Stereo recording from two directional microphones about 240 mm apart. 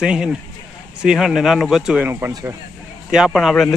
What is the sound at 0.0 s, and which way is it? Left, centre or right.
Speech, centre.